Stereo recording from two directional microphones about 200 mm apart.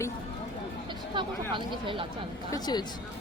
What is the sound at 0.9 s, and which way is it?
Speech, 25° right (ahead or behind).